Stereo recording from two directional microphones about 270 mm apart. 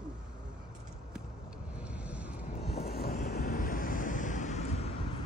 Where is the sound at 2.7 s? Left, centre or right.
Left.